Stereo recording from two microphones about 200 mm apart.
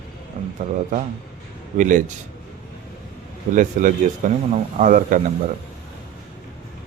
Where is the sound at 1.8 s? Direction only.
40° right (ahead or behind).